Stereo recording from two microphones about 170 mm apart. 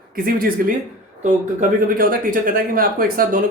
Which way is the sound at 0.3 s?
55° right (ahead or behind).